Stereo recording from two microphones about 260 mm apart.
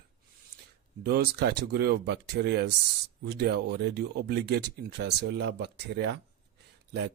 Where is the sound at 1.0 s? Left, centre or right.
Right.